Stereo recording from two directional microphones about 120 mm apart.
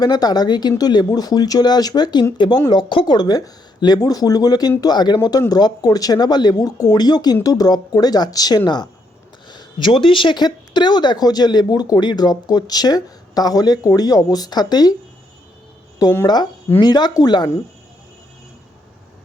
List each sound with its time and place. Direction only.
0.0 s speech: 35° left (ahead or behind)
16.2 s speech: 35° left (ahead or behind)